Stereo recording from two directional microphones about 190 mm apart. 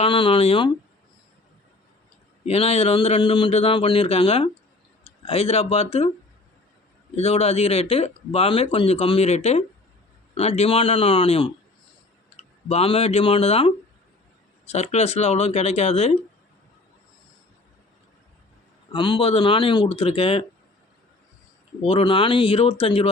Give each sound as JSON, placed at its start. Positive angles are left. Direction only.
{"t": 0.0, "sound": "speech", "side_deg": 25}
{"t": 2.4, "sound": "speech", "side_deg": 35}
{"t": 7.2, "sound": "speech", "side_deg": 30}
{"t": 18.9, "sound": "speech", "side_deg": 25}
{"t": 21.8, "sound": "speech", "side_deg": 25}